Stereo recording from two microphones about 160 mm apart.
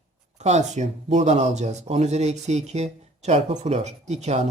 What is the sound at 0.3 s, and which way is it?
Speech, 45° right (ahead or behind).